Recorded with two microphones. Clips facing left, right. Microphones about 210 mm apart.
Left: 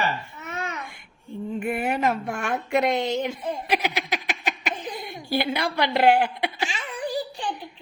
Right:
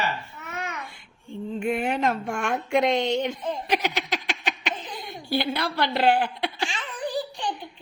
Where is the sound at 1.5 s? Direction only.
5° left (ahead or behind).